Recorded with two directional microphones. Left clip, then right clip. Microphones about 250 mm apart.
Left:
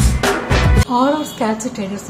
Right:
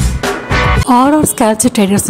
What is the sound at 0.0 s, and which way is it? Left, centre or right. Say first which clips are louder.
Music: even; centre.